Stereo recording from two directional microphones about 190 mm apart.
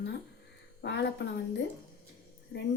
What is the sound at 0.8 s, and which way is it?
A woman's voice, 65° left (ahead or behind).